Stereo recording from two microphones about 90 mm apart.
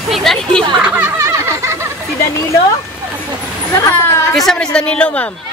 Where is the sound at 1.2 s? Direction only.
35° right (ahead or behind).